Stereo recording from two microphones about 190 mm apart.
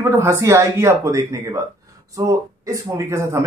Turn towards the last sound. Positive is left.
turn(degrees=-15)  # may be behind; listen again after turning